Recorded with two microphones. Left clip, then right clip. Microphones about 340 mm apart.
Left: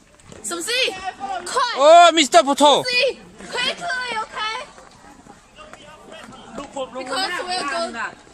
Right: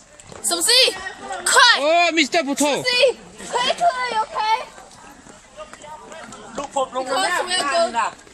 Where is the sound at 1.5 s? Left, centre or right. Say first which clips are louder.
Right 9 dB; right.